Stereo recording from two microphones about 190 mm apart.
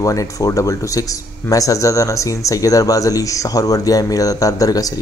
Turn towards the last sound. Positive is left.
turn(degrees=20)  # may be behind; listen again after turning